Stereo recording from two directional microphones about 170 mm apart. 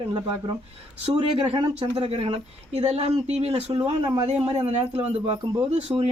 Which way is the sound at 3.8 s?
25° right (ahead or behind).